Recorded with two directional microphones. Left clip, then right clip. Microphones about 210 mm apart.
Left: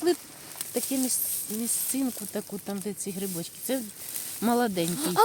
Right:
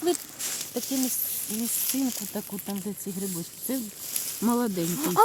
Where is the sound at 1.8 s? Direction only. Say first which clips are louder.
Right 2 dB; centre (ahead or behind).